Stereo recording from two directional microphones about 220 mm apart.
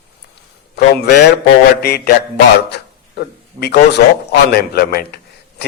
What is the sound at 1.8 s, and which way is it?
A man's voice, 45° left (ahead or behind).